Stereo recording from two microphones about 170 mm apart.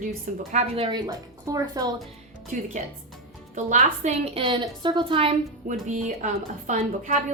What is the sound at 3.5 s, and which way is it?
A woman's voice, 45° right (ahead or behind).